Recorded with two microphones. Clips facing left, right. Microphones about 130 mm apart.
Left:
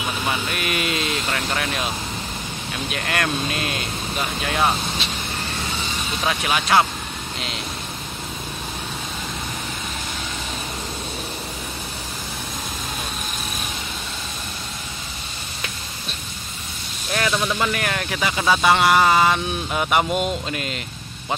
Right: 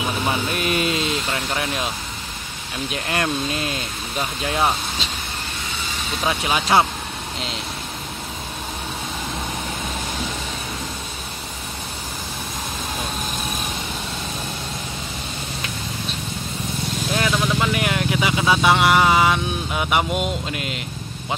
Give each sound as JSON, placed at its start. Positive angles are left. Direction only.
{"t": 0.3, "sound": "speech", "side_deg": -30}
{"t": 2.9, "sound": "speech", "side_deg": -25}
{"t": 6.2, "sound": "speech", "side_deg": -20}
{"t": 17.1, "sound": "speech", "side_deg": -10}